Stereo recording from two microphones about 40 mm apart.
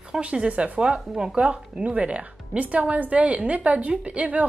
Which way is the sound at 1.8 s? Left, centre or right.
Right.